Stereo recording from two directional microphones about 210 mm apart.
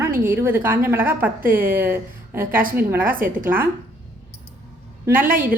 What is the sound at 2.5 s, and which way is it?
Speech, 40° right (ahead or behind).